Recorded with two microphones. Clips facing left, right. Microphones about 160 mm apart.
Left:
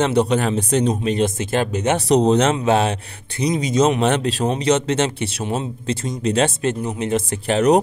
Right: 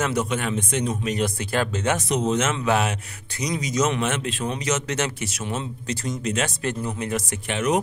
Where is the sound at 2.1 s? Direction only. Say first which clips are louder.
Left 12 dB; 35° left (ahead or behind).